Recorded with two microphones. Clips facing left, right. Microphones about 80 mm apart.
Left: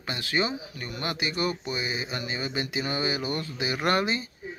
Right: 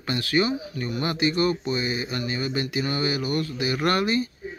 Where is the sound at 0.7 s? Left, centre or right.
Centre.